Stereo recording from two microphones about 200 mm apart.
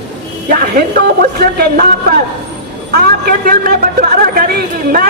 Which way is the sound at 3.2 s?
45° right (ahead or behind).